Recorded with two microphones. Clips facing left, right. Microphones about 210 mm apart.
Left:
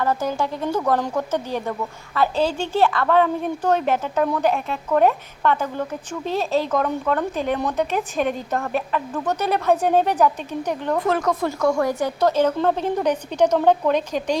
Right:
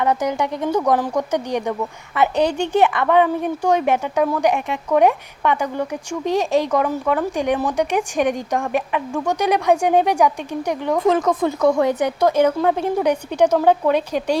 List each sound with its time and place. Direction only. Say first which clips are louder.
0.0 s a woman's voice: right 3 dB; 15° right (ahead or behind)
11.2 s speech: right 3 dB; centre (ahead or behind)
11.4 s a woman's voice: right 4 dB; 20° right (ahead or behind)